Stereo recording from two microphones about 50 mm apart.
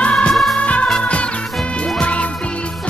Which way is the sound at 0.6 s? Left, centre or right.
Left.